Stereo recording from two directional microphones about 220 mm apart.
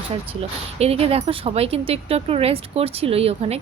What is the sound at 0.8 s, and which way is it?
Speech, 25° right (ahead or behind).